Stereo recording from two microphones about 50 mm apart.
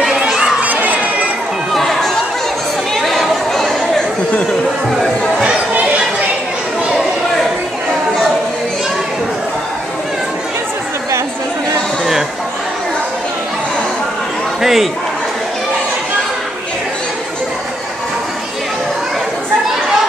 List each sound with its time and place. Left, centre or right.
0.0 s crowd: centre
0.6 s crowd: right
1.7 s chatter: centre
14.6 s a sound: centre